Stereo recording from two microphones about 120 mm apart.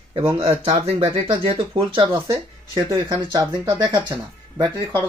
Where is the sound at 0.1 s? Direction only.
50° right (ahead or behind).